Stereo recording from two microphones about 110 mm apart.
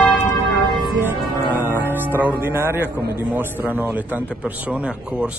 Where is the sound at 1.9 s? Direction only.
15° right (ahead or behind).